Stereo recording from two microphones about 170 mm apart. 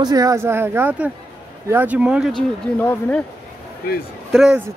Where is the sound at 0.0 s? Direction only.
20° right (ahead or behind); by 2.4 s 5° right (ahead or behind).